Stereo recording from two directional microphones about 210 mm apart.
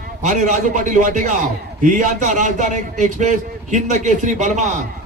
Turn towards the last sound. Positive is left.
turn(degrees=-35)  # may be behind; listen again after turning